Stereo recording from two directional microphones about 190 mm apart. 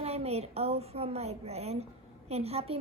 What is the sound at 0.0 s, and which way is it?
A woman's voice, 30° right (ahead or behind).